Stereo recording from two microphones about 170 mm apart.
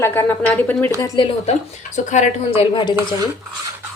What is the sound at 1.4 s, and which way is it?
A woman's voice, 40° left (ahead or behind).